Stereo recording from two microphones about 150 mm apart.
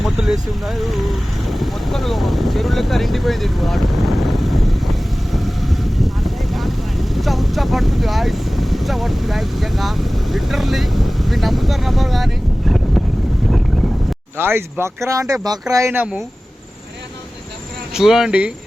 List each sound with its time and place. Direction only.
0.0 s speech: centre (ahead or behind)
5.3 s vehicle: centre (ahead or behind)
14.3 s speech: 15° right (ahead or behind)
17.9 s speech: 5° right (ahead or behind)